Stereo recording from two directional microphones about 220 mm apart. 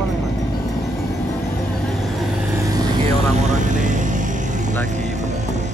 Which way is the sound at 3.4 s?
35° right (ahead or behind).